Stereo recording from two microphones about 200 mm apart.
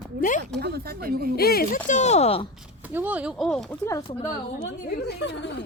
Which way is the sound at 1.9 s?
35° left (ahead or behind).